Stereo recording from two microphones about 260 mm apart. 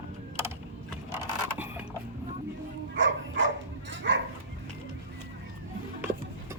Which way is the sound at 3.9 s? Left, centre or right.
Right.